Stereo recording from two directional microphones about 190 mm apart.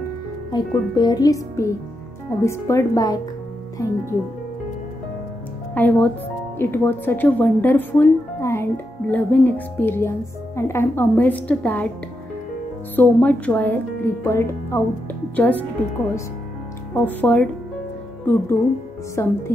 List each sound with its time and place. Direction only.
0.5 s speech: 20° left (ahead or behind)
5.8 s speech: 10° left (ahead or behind)
12.9 s speech: 10° left (ahead or behind)
16.9 s speech: 10° left (ahead or behind)